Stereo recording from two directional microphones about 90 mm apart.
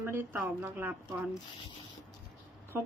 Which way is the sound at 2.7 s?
25° right (ahead or behind).